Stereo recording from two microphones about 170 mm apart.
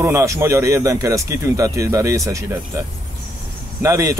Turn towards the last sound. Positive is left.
turn(degrees=-20)  # may be behind; listen again after turning